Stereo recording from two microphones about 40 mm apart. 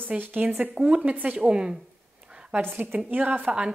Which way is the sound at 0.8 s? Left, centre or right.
Right.